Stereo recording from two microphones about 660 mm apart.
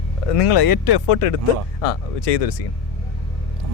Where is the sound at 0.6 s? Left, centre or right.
Left.